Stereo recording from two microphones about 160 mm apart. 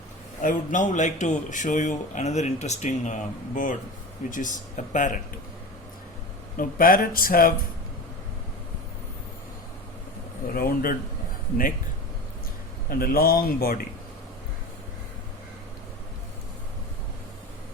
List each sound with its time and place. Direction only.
0.4 s speech: 50° left (ahead or behind)
6.6 s speech: 60° left (ahead or behind)
10.5 s speech: 65° left (ahead or behind)
12.9 s speech: 65° left (ahead or behind)